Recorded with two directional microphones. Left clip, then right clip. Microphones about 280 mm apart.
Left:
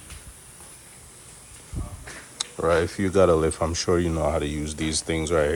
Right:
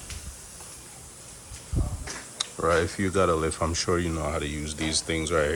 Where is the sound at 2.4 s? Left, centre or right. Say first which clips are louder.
Left 2 dB; centre.